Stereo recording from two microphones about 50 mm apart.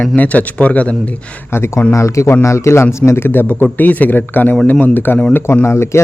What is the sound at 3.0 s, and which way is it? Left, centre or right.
Speech, left.